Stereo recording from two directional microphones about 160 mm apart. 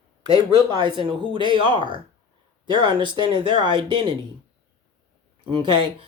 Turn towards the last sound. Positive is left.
turn(degrees=-35)  # may be behind; listen again after turning